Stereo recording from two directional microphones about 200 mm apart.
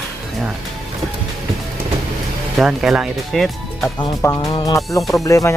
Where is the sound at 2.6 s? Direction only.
Centre (ahead or behind).